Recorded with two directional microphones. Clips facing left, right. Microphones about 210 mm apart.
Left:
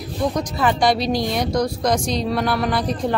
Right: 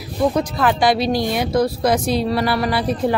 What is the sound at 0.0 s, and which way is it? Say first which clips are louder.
Speech: right 4 dB; 5° right (ahead or behind).